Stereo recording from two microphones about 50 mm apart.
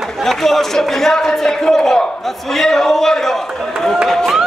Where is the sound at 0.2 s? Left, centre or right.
Centre.